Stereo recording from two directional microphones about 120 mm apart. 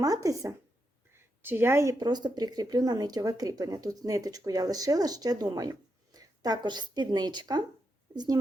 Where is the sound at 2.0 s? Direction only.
35° right (ahead or behind).